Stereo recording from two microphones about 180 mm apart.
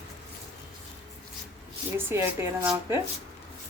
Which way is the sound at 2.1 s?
10° right (ahead or behind).